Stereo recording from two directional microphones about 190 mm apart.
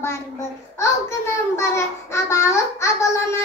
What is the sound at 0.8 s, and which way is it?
A child's voice, 15° left (ahead or behind).